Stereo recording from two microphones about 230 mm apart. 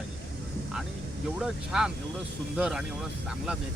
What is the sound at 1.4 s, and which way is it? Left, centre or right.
Speech, centre.